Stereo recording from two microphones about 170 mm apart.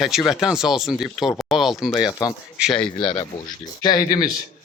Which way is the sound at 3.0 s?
30° left (ahead or behind).